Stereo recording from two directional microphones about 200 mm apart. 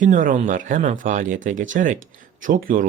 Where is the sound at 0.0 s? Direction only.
40° right (ahead or behind).